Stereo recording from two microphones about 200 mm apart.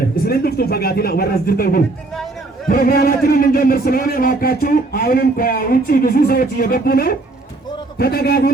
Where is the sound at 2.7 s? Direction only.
45° left (ahead or behind).